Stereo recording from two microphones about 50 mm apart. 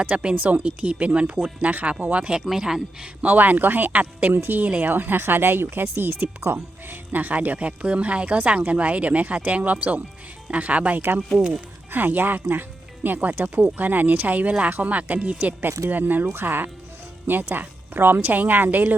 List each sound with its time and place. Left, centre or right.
0.0 s speech: right
2.4 s speech: centre
3.2 s a woman's voice: right
11.9 s a woman's voice: right
15.9 s a woman's voice: right